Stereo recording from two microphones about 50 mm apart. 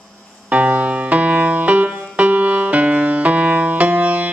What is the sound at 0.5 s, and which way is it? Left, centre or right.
Music, right.